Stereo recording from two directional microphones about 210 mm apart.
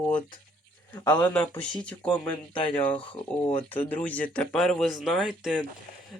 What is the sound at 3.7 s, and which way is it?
Speech, 10° left (ahead or behind).